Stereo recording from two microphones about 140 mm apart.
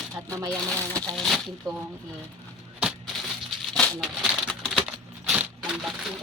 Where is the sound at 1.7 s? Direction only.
25° right (ahead or behind).